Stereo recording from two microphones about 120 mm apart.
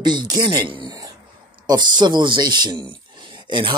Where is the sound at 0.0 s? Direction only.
40° right (ahead or behind).